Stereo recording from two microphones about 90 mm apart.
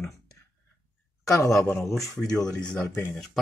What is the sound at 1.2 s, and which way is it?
Speech, 35° left (ahead or behind).